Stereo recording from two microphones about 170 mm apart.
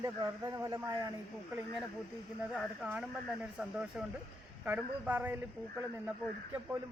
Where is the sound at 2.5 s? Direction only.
5° left (ahead or behind).